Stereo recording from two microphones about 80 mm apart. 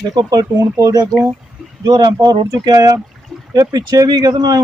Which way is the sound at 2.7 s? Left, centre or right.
Right.